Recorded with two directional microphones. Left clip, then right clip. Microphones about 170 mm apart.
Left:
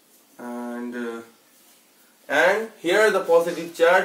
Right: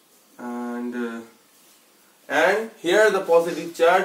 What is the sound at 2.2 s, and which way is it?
Speech, 10° right (ahead or behind).